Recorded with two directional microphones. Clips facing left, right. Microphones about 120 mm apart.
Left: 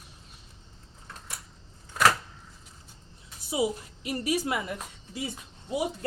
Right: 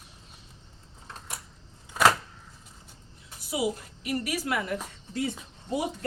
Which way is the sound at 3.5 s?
25° left (ahead or behind).